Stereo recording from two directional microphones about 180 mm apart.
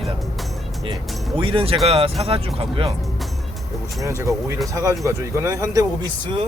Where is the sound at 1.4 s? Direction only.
30° right (ahead or behind).